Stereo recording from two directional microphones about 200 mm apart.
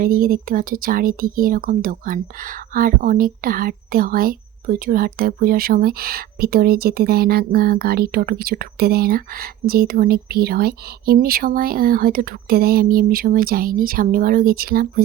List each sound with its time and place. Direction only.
0.0 s speech: 45° right (ahead or behind)